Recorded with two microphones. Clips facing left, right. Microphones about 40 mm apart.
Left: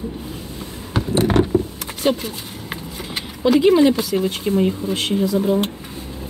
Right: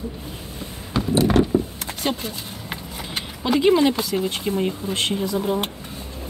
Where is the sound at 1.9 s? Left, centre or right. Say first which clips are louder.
Left 9 dB; centre.